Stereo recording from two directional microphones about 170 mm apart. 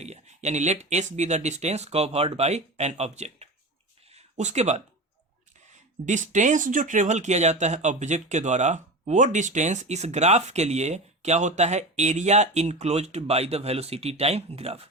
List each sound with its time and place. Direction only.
0.0 s speech: 40° right (ahead or behind)
4.1 s a sound: 40° right (ahead or behind)
5.7 s speech: 45° right (ahead or behind)